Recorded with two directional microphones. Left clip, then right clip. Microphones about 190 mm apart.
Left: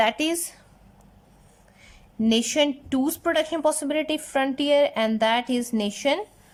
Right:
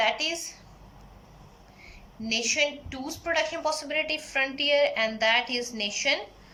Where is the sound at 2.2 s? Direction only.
45° left (ahead or behind).